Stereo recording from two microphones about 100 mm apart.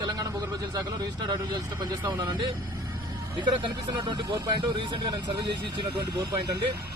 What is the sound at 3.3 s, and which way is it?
Speech, 50° right (ahead or behind).